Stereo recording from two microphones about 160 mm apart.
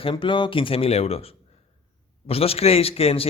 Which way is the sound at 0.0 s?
30° left (ahead or behind).